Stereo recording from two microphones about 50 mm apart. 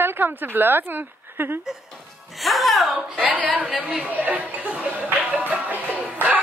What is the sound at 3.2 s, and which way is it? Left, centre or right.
Speech, right.